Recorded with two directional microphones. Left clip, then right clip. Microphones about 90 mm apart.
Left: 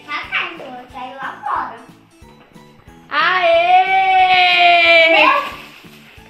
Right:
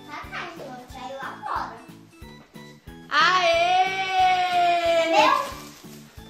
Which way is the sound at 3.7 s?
5° right (ahead or behind).